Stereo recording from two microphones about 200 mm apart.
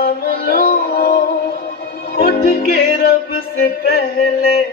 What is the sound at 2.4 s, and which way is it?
Music, 50° left (ahead or behind).